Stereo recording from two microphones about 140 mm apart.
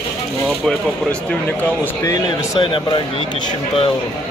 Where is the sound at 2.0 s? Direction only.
30° left (ahead or behind).